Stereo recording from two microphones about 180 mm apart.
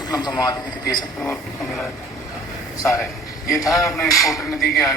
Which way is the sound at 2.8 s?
15° left (ahead or behind).